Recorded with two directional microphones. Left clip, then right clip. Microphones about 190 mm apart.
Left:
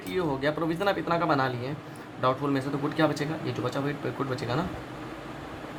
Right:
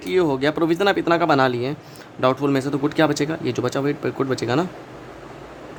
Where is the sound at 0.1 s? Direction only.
55° right (ahead or behind).